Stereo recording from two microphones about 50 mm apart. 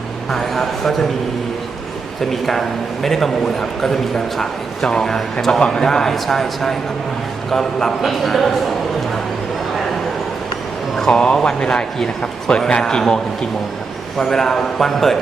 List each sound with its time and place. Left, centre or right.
0.3 s a man's voice: centre
2.3 s a man's voice: centre
10.9 s a man's voice: centre
14.2 s a man's voice: centre